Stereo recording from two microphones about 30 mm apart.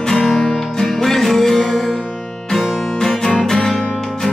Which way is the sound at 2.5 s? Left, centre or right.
Centre.